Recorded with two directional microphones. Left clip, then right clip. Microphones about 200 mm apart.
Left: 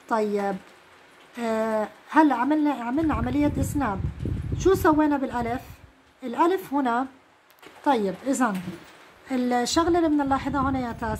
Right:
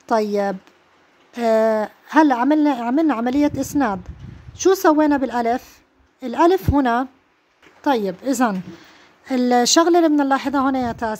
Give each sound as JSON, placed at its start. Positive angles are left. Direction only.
{"t": 0.0, "sound": "a woman's voice", "side_deg": -50}